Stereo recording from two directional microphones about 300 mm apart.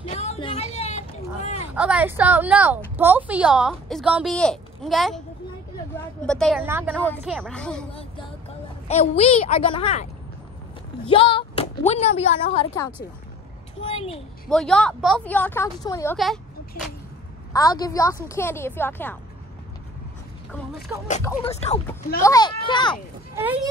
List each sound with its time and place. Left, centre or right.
0.0 s a sound: left
1.8 s a woman's voice: centre
6.2 s a woman's voice: centre
7.9 s a sound: centre
8.8 s a woman's voice: left
11.1 s a woman's voice: centre
14.5 s a woman's voice: centre
17.5 s a woman's voice: centre
21.2 s a woman's voice: centre
23.3 s speech: centre